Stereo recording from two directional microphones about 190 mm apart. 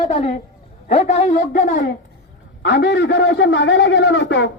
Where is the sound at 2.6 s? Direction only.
65° left (ahead or behind).